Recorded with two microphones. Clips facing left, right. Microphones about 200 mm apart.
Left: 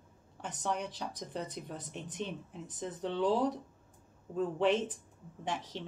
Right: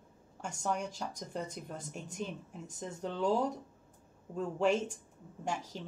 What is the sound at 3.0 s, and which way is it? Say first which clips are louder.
Speech: left 1 dB; 45° right (ahead or behind).